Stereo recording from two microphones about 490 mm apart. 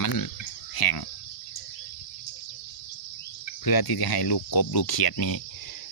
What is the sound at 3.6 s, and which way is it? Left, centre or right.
Speech, left.